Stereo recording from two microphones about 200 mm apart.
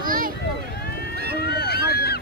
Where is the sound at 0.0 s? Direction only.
45° right (ahead or behind).